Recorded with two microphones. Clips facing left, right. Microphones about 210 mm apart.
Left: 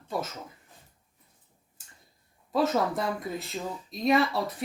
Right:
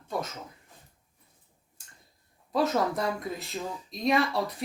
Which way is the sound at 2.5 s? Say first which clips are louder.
Left 1 dB; centre (ahead or behind).